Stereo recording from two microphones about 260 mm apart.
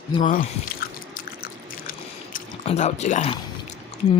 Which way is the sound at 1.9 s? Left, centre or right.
Left.